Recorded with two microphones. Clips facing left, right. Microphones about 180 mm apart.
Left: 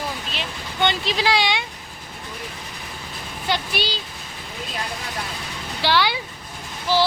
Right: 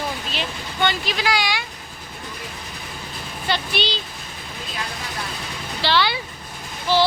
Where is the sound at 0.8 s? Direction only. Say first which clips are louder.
Left 1 dB; 25° left (ahead or behind).